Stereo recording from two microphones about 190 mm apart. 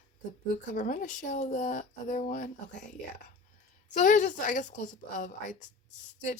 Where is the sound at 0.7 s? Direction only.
40° left (ahead or behind).